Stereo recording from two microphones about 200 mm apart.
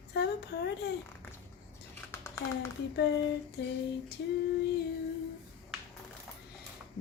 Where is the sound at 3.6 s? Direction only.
55° left (ahead or behind).